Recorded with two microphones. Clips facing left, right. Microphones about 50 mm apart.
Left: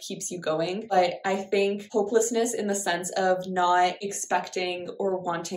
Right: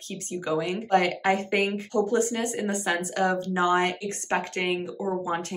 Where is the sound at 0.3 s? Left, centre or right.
Right.